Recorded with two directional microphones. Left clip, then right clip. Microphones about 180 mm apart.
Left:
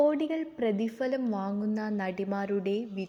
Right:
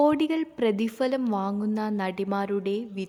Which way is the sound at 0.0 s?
25° right (ahead or behind).